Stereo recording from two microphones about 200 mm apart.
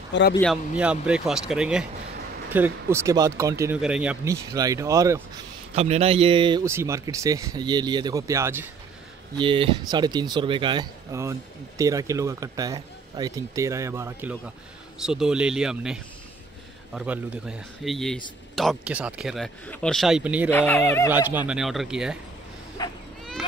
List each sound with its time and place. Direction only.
0.1 s a man's voice: 60° left (ahead or behind)
0.4 s speech: centre (ahead or behind)
5.8 s speech: 30° right (ahead or behind); by 8.6 s 15° right (ahead or behind)
9.4 s speech: 25° right (ahead or behind); by 20.4 s 5° right (ahead or behind)
20.4 s speech: 10° left (ahead or behind)
21.1 s speech: 10° right (ahead or behind)
22.8 s speech: 20° left (ahead or behind)